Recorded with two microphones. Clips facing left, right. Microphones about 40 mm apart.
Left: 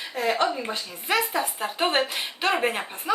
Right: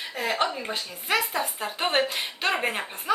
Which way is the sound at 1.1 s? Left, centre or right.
Centre.